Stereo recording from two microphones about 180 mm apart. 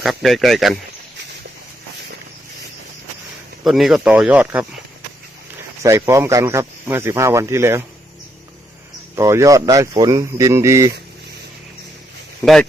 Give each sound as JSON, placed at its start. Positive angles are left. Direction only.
{"t": 0.0, "sound": "speech", "side_deg": 0}
{"t": 3.6, "sound": "speech", "side_deg": 0}
{"t": 5.8, "sound": "speech", "side_deg": -15}
{"t": 9.1, "sound": "speech", "side_deg": -15}
{"t": 12.4, "sound": "speech", "side_deg": 10}